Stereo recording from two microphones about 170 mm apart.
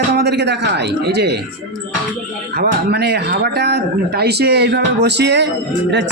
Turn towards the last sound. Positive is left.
turn(degrees=-90)